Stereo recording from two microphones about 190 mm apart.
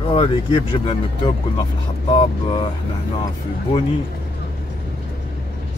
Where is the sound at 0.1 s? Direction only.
30° left (ahead or behind).